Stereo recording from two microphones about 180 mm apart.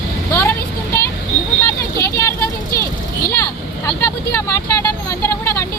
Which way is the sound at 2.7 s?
55° left (ahead or behind).